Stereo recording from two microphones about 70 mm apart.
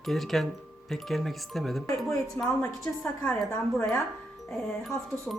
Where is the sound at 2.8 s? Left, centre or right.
Centre.